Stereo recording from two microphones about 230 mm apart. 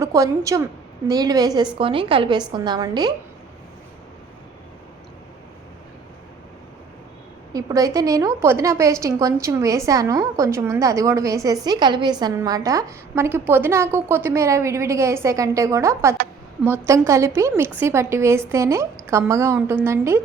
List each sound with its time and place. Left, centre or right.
0.0 s a woman's voice: centre
7.5 s a woman's voice: centre